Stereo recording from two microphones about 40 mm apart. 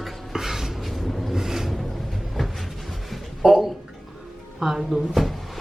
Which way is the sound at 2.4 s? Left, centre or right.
Centre.